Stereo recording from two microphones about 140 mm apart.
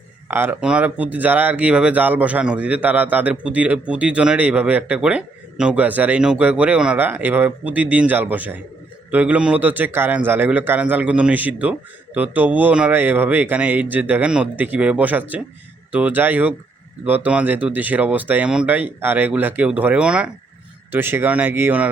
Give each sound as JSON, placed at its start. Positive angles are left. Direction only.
{"t": 0.3, "sound": "speech", "side_deg": -15}